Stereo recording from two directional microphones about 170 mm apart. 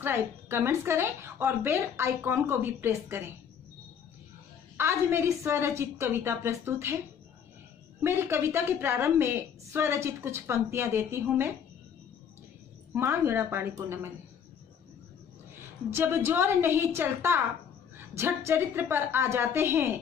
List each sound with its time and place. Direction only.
0.0 s a woman's voice: 15° right (ahead or behind)
4.7 s a woman's voice: 15° right (ahead or behind)
8.0 s a woman's voice: 15° right (ahead or behind)
12.9 s a woman's voice: 15° right (ahead or behind)
15.9 s a woman's voice: 15° right (ahead or behind)